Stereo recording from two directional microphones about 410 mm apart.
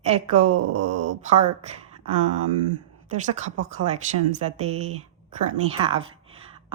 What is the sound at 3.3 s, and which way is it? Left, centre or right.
Speech, centre.